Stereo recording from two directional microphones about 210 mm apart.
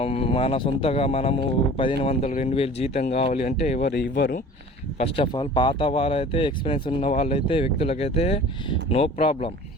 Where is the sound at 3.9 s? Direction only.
50° left (ahead or behind).